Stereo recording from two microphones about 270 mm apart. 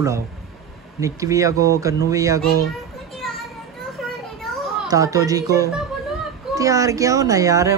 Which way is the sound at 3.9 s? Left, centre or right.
Centre.